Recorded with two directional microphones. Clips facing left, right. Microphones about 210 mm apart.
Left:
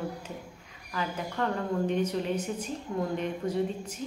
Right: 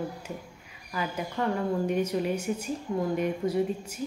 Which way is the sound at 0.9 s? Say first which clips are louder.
Right 1 dB; 10° right (ahead or behind).